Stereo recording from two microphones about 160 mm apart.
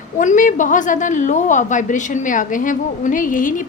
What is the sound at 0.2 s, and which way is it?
A woman's voice, 50° left (ahead or behind).